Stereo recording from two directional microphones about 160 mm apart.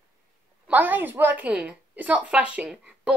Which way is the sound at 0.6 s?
10° right (ahead or behind).